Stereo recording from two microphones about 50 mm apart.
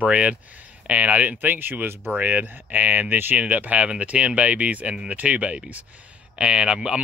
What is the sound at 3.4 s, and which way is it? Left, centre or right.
Speech, right.